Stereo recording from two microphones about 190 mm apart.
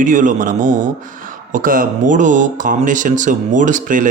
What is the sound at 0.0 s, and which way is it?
Speech, 45° right (ahead or behind).